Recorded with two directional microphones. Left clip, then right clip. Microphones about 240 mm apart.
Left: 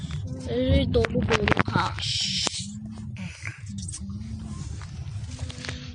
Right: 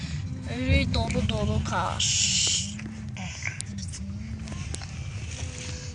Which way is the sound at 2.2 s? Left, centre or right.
Centre.